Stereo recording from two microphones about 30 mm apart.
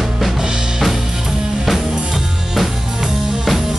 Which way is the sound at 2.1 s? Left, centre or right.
Centre.